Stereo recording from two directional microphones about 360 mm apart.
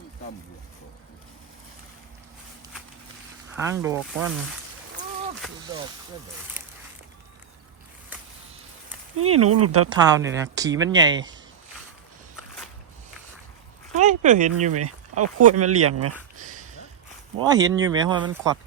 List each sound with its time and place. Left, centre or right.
3.5 s speech: centre
9.1 s speech: right
9.9 s speech: centre
13.9 s speech: centre
14.7 s speech: right
17.4 s speech: centre